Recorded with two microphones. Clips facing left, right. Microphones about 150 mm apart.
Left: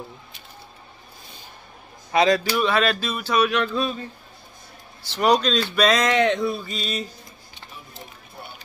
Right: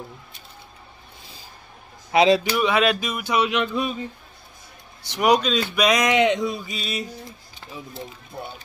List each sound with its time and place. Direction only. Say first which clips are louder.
2.1 s speech: right 2 dB; 25° right (ahead or behind)
5.0 s speech: even; 15° right (ahead or behind)